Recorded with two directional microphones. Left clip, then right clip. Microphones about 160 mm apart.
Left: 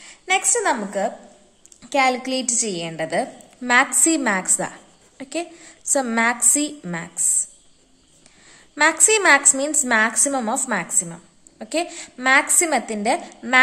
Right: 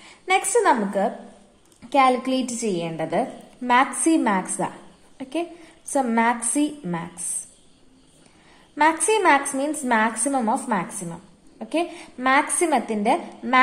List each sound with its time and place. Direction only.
0.0 s a woman's voice: 10° left (ahead or behind)
9.0 s a woman's voice: 20° left (ahead or behind)